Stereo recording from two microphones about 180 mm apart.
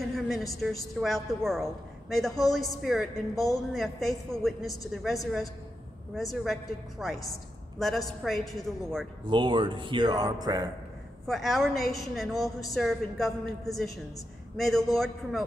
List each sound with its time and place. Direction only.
0.0 s a sound: centre (ahead or behind)
0.9 s a woman's voice: centre (ahead or behind)
9.2 s a man's voice: 25° right (ahead or behind)
11.2 s a woman's voice: centre (ahead or behind)